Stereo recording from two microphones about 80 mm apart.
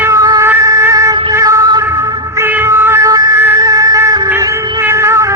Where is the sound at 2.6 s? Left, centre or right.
Right.